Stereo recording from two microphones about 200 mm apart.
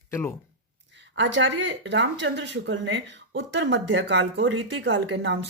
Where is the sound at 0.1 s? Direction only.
10° left (ahead or behind).